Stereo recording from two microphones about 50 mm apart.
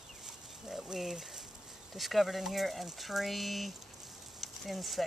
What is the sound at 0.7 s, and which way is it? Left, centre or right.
Speech, centre.